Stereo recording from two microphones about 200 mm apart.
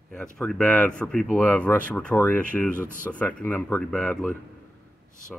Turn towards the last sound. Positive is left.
turn(degrees=10)  # may be behind; listen again after turning